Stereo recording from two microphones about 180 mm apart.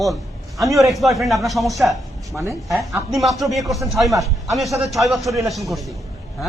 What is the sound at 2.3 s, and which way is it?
Speech, 15° right (ahead or behind).